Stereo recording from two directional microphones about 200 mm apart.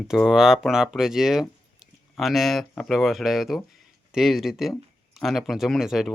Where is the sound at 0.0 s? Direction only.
Centre (ahead or behind).